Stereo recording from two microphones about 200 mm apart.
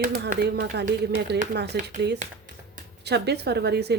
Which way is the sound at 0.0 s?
45° right (ahead or behind).